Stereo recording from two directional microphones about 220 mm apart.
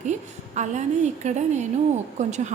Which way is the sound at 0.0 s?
35° right (ahead or behind).